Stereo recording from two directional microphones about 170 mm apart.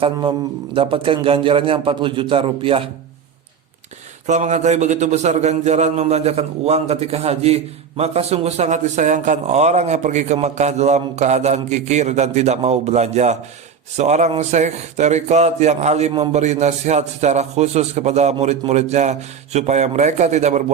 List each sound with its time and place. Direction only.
0.0 s a man's voice: 30° right (ahead or behind)
4.3 s a man's voice: 45° right (ahead or behind)